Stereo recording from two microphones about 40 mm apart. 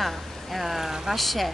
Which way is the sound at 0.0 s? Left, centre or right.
Centre.